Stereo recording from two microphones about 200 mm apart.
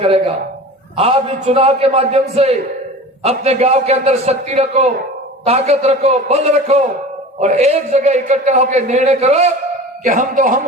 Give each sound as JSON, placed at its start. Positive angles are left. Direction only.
{"t": 0.0, "sound": "a man's voice", "side_deg": -30}